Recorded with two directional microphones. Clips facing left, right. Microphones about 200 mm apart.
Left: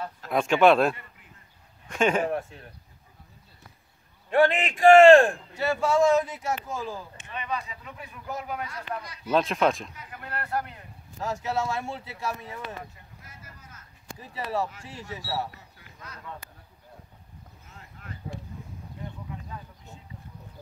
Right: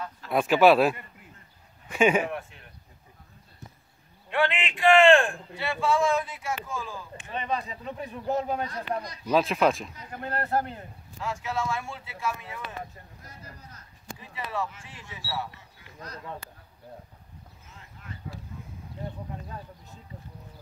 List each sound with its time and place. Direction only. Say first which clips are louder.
0.3 s speech: even; 5° right (ahead or behind)
2.2 s a man's voice: left 5 dB; 35° left (ahead or behind)
4.3 s a man's voice: left 5 dB; 40° left (ahead or behind)
7.2 s speech: right 3 dB; 35° right (ahead or behind)
9.3 s speech: right 1 dB; centre (ahead or behind)
9.9 s speech: right 5 dB; 35° right (ahead or behind)
11.1 s a man's voice: left 2 dB; 40° left (ahead or behind)
13.2 s speech: right 3 dB; 35° right (ahead or behind)
14.1 s a man's voice: left 3 dB; 40° left (ahead or behind)